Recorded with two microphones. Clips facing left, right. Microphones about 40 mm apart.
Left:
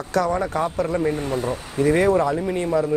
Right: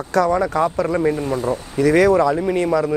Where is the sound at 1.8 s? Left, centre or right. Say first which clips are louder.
Right 4 dB; right.